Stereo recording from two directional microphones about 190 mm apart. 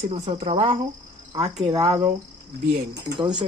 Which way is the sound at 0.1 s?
30° right (ahead or behind).